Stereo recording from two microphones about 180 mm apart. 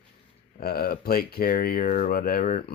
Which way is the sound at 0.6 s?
55° left (ahead or behind).